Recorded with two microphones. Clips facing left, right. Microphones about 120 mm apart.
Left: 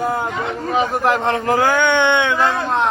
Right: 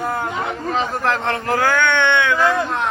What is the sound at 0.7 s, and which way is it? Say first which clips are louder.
Speech: left 4 dB; 15° left (ahead or behind).